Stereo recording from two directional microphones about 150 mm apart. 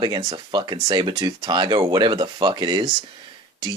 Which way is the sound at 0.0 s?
30° right (ahead or behind).